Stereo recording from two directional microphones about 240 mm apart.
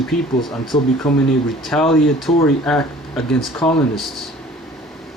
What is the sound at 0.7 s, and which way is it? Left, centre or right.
Speech, left.